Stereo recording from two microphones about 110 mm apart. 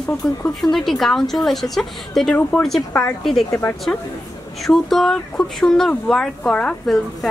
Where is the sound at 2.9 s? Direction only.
15° left (ahead or behind).